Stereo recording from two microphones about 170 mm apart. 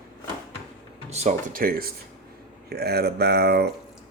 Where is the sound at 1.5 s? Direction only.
60° right (ahead or behind).